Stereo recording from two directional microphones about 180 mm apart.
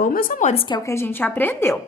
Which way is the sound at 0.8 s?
15° left (ahead or behind).